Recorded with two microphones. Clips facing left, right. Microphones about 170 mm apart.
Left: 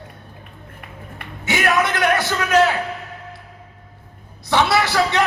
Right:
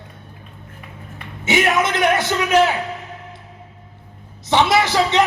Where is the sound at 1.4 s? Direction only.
20° right (ahead or behind).